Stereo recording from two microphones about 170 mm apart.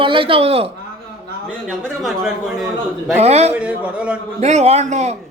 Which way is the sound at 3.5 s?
5° right (ahead or behind).